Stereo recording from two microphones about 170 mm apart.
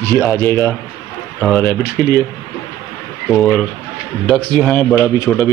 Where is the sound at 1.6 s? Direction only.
15° left (ahead or behind).